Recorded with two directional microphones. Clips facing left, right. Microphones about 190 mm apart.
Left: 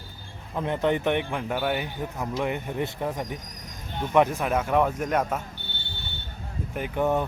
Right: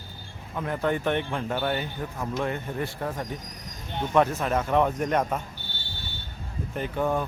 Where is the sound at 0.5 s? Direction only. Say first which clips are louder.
Left 2 dB; 25° left (ahead or behind); by 5.4 s 5° left (ahead or behind).